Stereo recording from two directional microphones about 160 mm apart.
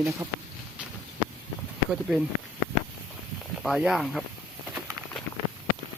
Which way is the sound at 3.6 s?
Centre (ahead or behind).